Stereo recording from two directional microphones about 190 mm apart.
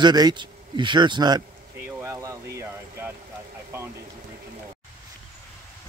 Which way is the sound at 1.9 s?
15° right (ahead or behind).